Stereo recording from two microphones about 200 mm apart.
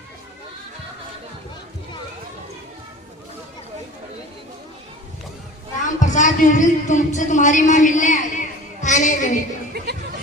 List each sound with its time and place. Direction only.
5.8 s speech: 40° left (ahead or behind)
8.8 s child singing: 40° left (ahead or behind)
9.7 s music: 55° right (ahead or behind)